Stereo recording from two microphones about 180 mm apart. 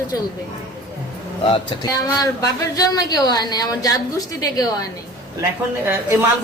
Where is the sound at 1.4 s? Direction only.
30° left (ahead or behind).